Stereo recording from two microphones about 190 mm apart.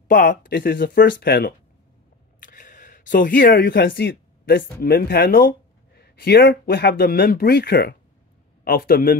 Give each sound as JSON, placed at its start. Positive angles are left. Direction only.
{"t": 0.1, "sound": "a man's voice", "side_deg": 45}
{"t": 0.6, "sound": "speech", "side_deg": 60}
{"t": 2.4, "sound": "camera", "side_deg": 45}
{"t": 3.5, "sound": "a man's voice", "side_deg": 55}